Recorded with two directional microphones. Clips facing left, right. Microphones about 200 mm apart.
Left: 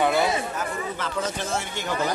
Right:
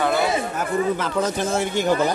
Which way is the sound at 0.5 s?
45° right (ahead or behind).